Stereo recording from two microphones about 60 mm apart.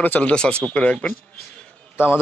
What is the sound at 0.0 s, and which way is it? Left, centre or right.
Speech, left.